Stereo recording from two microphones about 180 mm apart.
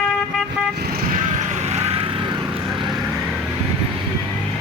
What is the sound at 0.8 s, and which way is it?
Vehicle, 55° right (ahead or behind).